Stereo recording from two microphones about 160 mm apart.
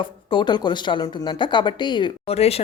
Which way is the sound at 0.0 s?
30° left (ahead or behind).